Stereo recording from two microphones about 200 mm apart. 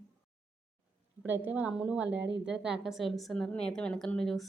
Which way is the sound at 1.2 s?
10° right (ahead or behind).